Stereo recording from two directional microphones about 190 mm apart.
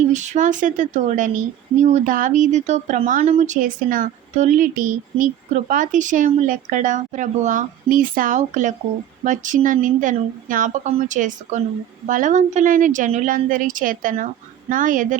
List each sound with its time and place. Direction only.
0.1 s speech: 40° right (ahead or behind)